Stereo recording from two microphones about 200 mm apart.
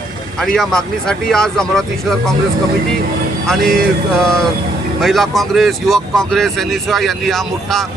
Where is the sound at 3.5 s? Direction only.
Centre (ahead or behind).